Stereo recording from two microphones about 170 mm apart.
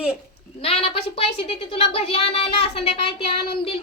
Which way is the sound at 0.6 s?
35° left (ahead or behind).